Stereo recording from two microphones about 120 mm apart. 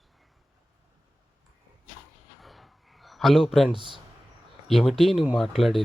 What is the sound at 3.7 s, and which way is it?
Speech, 40° right (ahead or behind).